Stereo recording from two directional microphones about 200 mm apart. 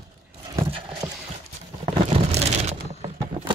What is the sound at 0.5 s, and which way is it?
Horse, 25° right (ahead or behind).